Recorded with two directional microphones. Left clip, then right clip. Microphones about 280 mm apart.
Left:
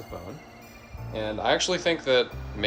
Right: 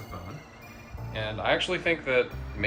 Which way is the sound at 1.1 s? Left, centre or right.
Centre.